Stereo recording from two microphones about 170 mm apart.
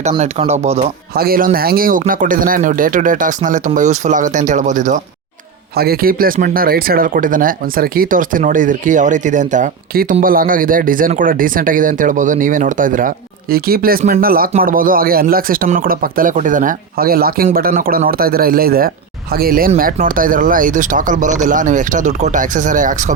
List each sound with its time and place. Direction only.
0.2 s speech: 40° right (ahead or behind)
1.1 s speech: 60° right (ahead or behind); by 4.9 s 45° right (ahead or behind)
5.7 s speech: 65° right (ahead or behind)